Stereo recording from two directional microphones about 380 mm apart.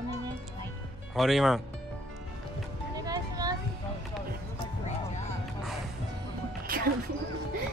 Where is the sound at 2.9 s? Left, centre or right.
Centre.